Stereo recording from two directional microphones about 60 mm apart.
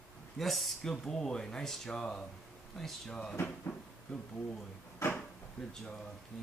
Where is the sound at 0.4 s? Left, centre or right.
Centre.